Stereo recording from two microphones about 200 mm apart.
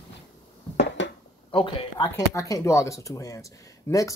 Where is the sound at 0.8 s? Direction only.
65° left (ahead or behind).